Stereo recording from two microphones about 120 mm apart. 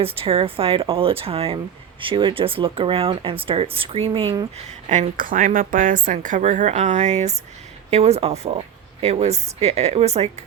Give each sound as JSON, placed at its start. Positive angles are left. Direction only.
{"t": 0.0, "sound": "speech", "side_deg": -50}
{"t": 4.6, "sound": "speech", "side_deg": -75}
{"t": 5.5, "sound": "a woman's voice", "side_deg": -90}